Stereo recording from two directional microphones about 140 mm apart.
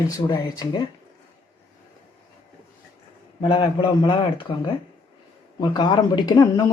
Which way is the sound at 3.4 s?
35° left (ahead or behind).